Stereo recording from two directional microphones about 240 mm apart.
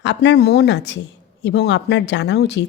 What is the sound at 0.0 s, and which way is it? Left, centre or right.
A woman's voice, left.